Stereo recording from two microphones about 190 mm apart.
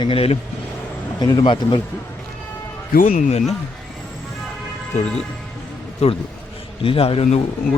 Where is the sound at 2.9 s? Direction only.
45° left (ahead or behind).